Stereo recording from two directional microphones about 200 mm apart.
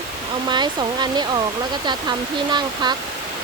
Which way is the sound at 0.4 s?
20° right (ahead or behind).